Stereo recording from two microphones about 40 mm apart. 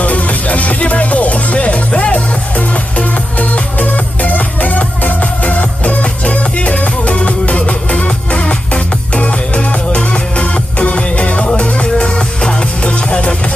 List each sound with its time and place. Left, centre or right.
0.0 s music: left